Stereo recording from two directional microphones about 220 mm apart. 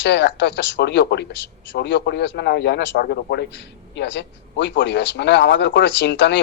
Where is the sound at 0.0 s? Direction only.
55° left (ahead or behind).